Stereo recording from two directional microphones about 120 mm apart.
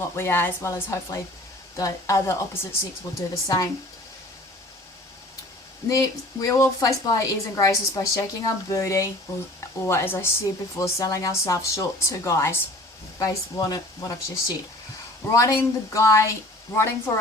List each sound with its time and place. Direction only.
0.0 s a woman's voice: 20° left (ahead or behind)
5.9 s a woman's voice: 30° left (ahead or behind)